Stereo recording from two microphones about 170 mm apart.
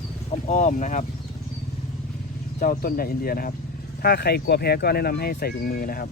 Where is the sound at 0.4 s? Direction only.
45° left (ahead or behind).